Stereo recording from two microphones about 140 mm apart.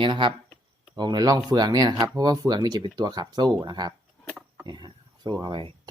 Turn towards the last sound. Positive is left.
turn(degrees=-35)  # may be behind; listen again after turning